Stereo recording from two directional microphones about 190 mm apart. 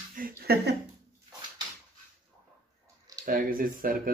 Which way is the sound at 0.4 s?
55° right (ahead or behind).